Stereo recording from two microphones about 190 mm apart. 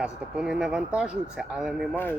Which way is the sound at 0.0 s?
5° right (ahead or behind).